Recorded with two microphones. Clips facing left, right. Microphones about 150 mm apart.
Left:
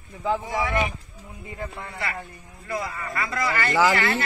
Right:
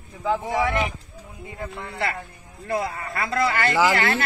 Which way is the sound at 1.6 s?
5° left (ahead or behind).